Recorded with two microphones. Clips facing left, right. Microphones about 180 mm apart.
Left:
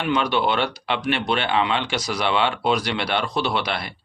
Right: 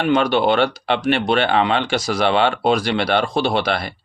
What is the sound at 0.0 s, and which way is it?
Speech, 50° right (ahead or behind).